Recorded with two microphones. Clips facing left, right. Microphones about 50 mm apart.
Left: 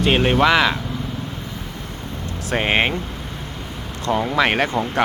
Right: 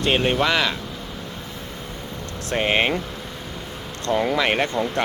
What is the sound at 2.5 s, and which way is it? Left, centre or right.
Speech, centre.